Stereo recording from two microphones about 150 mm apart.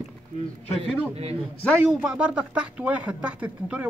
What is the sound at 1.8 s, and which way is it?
Speech, 5° right (ahead or behind).